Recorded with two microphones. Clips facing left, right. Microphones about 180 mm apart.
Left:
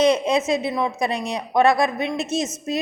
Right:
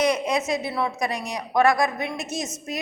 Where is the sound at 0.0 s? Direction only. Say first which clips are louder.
Left 4 dB; 25° left (ahead or behind).